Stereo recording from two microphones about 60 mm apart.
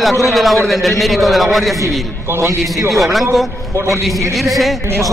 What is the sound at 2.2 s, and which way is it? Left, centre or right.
Speech, right.